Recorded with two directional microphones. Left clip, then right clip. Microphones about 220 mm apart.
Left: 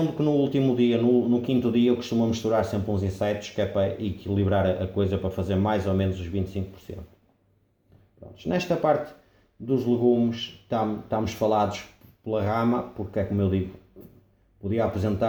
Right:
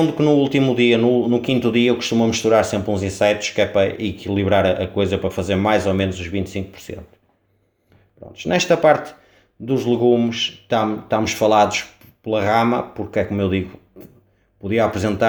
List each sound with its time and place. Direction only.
0.2 s speech: 40° right (ahead or behind)
8.4 s speech: 40° right (ahead or behind)
14.6 s speech: 40° right (ahead or behind)